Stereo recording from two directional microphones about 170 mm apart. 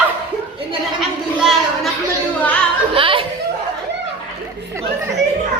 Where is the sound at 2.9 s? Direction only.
30° right (ahead or behind).